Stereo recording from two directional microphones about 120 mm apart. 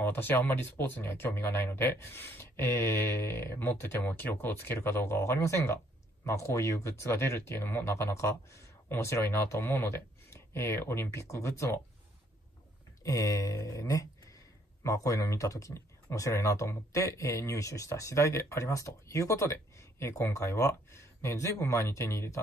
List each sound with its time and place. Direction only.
0.0 s speech: 15° left (ahead or behind)
13.0 s speech: 30° left (ahead or behind)